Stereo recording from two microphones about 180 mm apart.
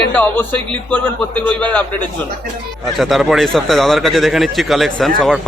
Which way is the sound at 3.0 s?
Centre (ahead or behind).